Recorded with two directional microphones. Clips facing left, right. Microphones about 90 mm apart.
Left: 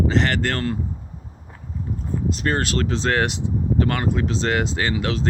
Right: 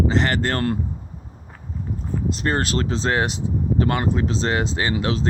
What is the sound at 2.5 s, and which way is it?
Speech, 35° right (ahead or behind).